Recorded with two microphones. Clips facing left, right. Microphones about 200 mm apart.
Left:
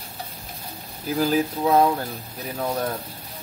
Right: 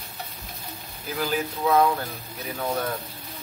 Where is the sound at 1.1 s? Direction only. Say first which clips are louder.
Left 6 dB; 35° left (ahead or behind).